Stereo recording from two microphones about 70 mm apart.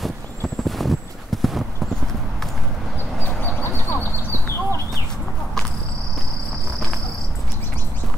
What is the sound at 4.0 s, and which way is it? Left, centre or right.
Clip-clop, left.